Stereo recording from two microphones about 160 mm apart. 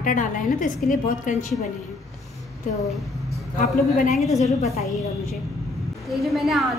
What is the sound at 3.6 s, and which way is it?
Speech, 55° left (ahead or behind).